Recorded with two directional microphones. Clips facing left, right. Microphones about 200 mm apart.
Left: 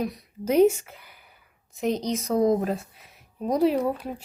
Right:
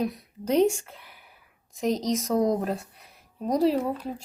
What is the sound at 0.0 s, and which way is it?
A woman's voice, centre (ahead or behind).